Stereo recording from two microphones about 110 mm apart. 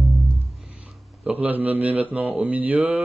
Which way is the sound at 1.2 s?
15° right (ahead or behind).